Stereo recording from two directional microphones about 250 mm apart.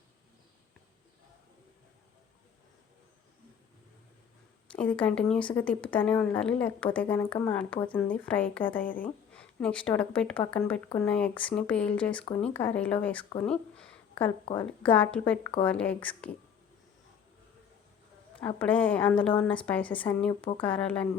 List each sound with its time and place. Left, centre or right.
4.7 s speech: centre
18.3 s speech: centre